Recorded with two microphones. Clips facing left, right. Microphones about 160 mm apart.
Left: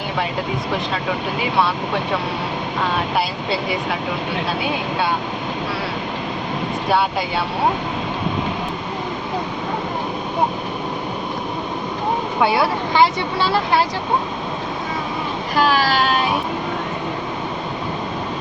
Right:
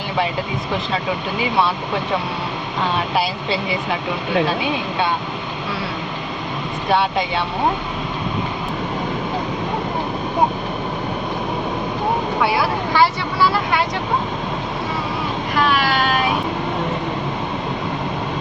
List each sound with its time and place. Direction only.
12.4 s speech: 20° left (ahead or behind)
15.5 s child singing: 35° left (ahead or behind)